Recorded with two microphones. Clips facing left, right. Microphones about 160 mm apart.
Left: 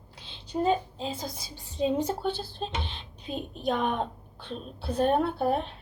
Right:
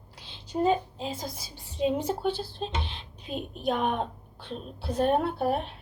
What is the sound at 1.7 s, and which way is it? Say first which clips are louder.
Speech: even; 35° left (ahead or behind).